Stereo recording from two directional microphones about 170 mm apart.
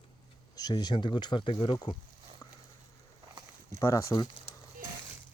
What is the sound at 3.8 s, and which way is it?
Speech, 15° left (ahead or behind).